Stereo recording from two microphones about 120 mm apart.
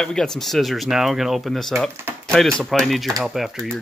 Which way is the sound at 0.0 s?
5° left (ahead or behind).